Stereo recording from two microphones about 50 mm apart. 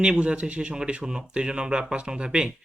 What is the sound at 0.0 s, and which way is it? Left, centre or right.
Speech, centre.